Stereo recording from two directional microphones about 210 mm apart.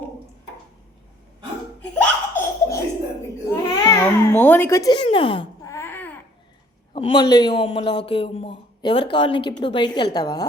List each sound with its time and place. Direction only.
1.8 s laughter: 5° left (ahead or behind)
3.5 s babbling: 10° left (ahead or behind)
5.0 s wail: 25° left (ahead or behind); by 6.1 s 10° left (ahead or behind)
6.9 s a man's voice: 25° left (ahead or behind)